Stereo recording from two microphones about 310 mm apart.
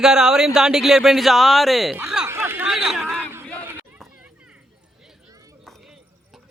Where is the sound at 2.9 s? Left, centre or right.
Centre.